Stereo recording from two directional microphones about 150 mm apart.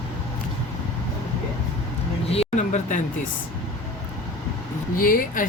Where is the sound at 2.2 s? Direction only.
40° left (ahead or behind).